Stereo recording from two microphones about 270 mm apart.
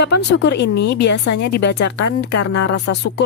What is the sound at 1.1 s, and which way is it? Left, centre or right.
Speech, left.